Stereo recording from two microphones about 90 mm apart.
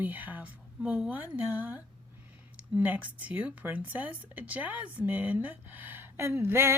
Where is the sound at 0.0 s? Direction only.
20° right (ahead or behind).